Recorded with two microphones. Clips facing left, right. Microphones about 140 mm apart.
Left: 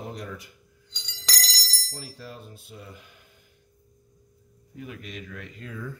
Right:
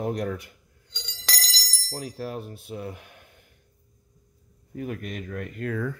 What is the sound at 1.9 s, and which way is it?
Speech, 55° right (ahead or behind).